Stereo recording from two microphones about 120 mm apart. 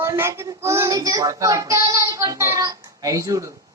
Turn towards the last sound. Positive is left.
turn(degrees=-25)  # may be behind; listen again after turning